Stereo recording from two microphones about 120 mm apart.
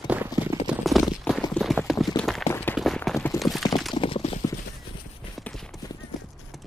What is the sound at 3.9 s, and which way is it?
Clip-clop, 45° left (ahead or behind).